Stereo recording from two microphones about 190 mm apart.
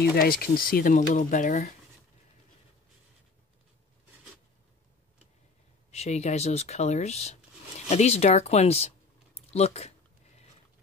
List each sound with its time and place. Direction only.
0.1 s speech: 50° left (ahead or behind)
5.9 s speech: 35° left (ahead or behind)